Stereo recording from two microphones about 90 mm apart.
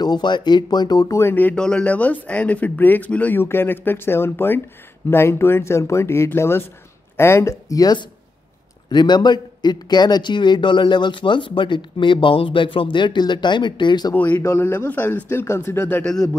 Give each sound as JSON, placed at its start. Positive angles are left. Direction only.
{"t": 0.0, "sound": "speech", "side_deg": 55}
{"t": 1.2, "sound": "speech", "side_deg": 20}
{"t": 1.5, "sound": "speech", "side_deg": 10}
{"t": 8.9, "sound": "a man's voice", "side_deg": 55}
{"t": 14.1, "sound": "speech", "side_deg": 20}